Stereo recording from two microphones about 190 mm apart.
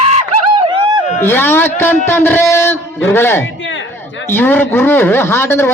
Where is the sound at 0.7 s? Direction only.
25° right (ahead or behind).